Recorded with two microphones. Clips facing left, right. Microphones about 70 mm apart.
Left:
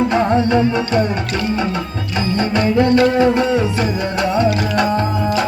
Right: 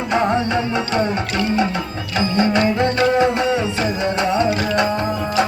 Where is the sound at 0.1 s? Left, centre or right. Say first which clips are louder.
Left 3 dB; right.